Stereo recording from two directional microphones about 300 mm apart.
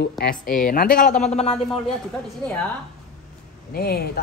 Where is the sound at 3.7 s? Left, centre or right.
Left.